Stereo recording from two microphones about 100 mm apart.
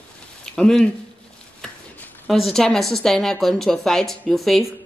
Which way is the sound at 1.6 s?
10° left (ahead or behind).